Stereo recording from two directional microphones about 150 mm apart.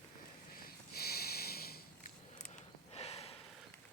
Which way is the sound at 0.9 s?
90° left.